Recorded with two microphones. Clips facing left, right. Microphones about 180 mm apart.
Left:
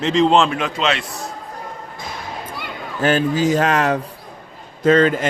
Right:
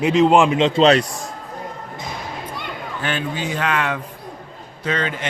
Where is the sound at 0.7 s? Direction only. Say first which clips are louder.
Right 9 dB; 35° right (ahead or behind).